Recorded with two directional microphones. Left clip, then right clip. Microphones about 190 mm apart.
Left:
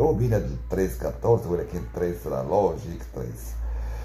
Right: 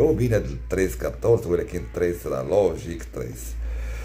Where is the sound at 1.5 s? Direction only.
15° right (ahead or behind).